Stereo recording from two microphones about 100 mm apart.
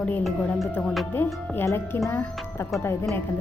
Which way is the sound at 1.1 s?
20° left (ahead or behind).